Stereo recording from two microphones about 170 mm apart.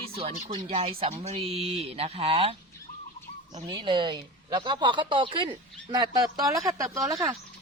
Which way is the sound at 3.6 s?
25° right (ahead or behind).